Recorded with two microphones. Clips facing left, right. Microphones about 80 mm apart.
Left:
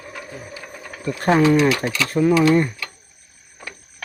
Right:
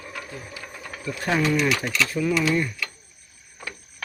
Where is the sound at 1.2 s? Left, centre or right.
Left.